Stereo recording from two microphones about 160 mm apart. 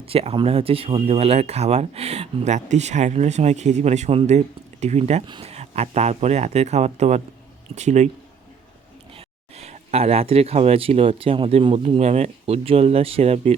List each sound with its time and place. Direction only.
0.0 s speech: 35° right (ahead or behind)
9.1 s speech: 40° right (ahead or behind)